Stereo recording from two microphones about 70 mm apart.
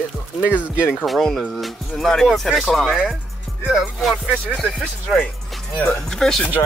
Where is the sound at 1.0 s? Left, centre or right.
Centre.